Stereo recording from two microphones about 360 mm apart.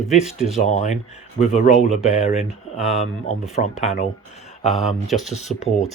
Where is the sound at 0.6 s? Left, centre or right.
Centre.